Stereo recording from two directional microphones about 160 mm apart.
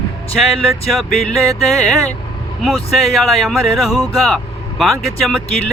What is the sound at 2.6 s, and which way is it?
Music, centre (ahead or behind).